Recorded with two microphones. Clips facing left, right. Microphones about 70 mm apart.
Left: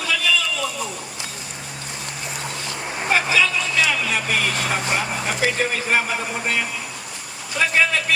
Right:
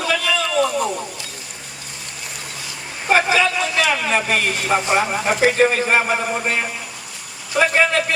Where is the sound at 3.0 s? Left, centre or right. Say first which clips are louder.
Right 3 dB; right.